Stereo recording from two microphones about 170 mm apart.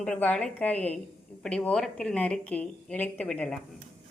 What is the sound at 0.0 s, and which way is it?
A woman's voice, 5° left (ahead or behind).